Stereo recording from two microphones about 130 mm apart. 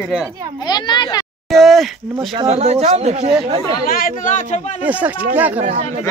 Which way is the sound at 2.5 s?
55° right (ahead or behind).